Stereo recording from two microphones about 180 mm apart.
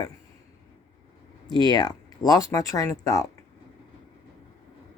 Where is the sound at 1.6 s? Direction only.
20° left (ahead or behind).